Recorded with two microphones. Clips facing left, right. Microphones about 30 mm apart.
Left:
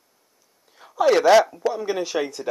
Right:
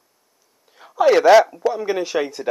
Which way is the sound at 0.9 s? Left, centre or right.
Centre.